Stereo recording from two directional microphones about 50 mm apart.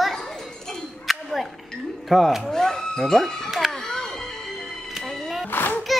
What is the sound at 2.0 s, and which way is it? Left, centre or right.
Speech, centre.